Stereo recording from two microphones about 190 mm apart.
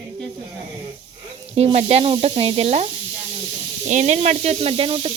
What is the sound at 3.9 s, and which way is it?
Speech, 40° right (ahead or behind).